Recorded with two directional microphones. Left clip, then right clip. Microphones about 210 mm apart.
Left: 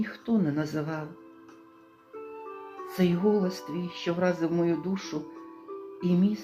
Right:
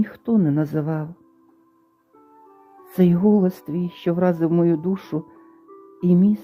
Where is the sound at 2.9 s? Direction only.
45° right (ahead or behind).